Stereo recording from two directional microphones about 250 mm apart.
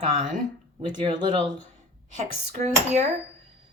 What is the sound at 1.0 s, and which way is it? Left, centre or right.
Speech, centre.